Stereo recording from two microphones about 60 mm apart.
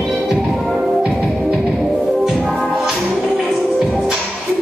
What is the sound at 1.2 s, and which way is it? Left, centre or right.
Music, centre.